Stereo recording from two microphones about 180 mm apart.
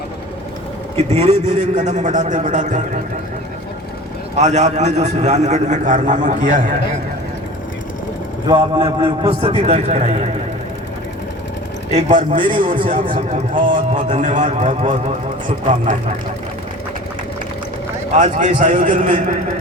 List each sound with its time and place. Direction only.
0.9 s a man's voice: 35° right (ahead or behind)
4.4 s a man's voice: 40° right (ahead or behind)
8.4 s a man's voice: 25° right (ahead or behind)
11.9 s a man's voice: 40° right (ahead or behind)
18.1 s a man's voice: 45° right (ahead or behind)